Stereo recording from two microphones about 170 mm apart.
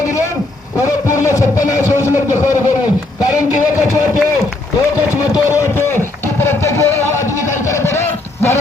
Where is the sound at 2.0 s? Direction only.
20° left (ahead or behind).